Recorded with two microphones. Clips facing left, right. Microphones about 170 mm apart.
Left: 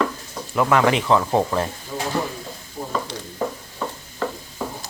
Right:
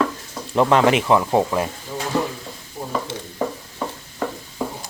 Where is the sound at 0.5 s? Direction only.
20° right (ahead or behind).